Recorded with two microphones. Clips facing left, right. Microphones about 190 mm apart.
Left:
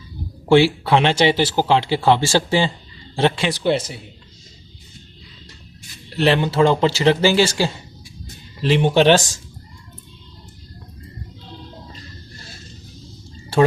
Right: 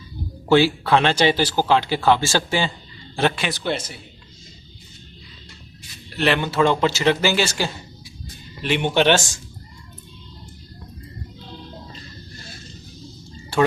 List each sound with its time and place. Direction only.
0.4 s speech: 25° left (ahead or behind)
6.1 s speech: 30° left (ahead or behind)